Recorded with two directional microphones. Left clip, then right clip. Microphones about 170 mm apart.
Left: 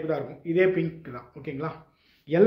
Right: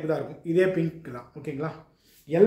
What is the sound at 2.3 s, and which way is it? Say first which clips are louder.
Speech: even; 20° left (ahead or behind).